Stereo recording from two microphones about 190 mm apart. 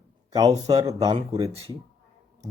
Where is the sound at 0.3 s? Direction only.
20° right (ahead or behind).